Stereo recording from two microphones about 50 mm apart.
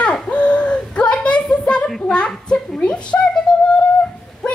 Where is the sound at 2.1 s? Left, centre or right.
Centre.